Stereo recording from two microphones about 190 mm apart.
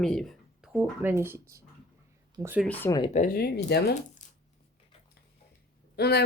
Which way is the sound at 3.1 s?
45° left (ahead or behind).